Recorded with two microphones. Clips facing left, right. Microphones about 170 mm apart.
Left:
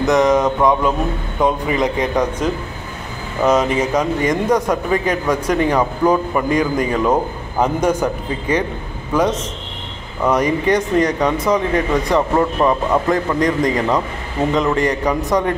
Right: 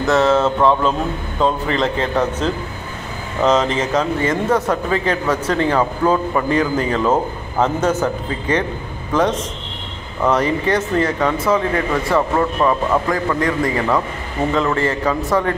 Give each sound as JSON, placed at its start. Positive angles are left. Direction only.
{"t": 0.0, "sound": "speech", "side_deg": 15}